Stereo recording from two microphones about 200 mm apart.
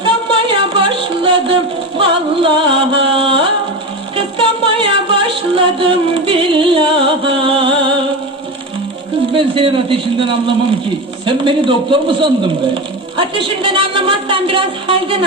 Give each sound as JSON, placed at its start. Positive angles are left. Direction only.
{"t": 0.0, "sound": "music", "side_deg": -25}
{"t": 4.9, "sound": "music", "side_deg": -25}
{"t": 9.3, "sound": "a man's voice", "side_deg": -25}
{"t": 11.3, "sound": "a man's voice", "side_deg": -25}